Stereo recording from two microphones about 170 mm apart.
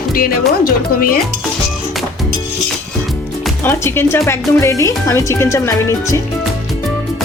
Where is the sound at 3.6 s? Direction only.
15° left (ahead or behind).